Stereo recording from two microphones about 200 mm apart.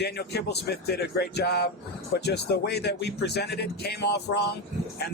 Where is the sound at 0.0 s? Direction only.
55° left (ahead or behind).